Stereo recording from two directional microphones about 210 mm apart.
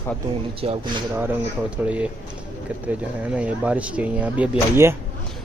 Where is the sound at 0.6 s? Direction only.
25° right (ahead or behind).